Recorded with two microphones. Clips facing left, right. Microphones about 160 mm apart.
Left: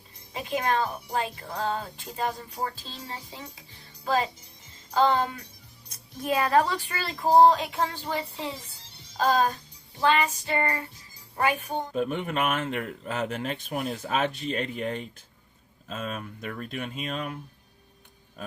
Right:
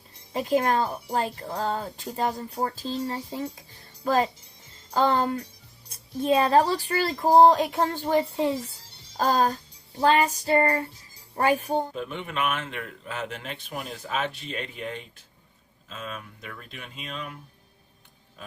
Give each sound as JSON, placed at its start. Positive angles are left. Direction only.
{"t": 0.3, "sound": "a woman's voice", "side_deg": -40}
{"t": 5.9, "sound": "a woman's voice", "side_deg": -25}
{"t": 9.1, "sound": "speech", "side_deg": -40}
{"t": 11.9, "sound": "speech", "side_deg": 45}
{"t": 18.4, "sound": "speech", "side_deg": 45}